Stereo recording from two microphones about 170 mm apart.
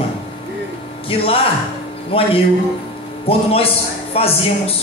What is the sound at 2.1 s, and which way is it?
A man's voice, 35° left (ahead or behind).